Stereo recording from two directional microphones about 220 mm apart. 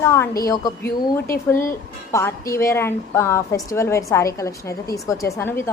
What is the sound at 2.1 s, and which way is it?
A woman's voice, 15° left (ahead or behind).